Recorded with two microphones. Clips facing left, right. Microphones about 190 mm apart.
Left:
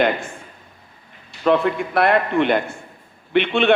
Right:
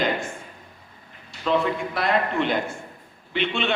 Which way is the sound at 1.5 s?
60° left (ahead or behind).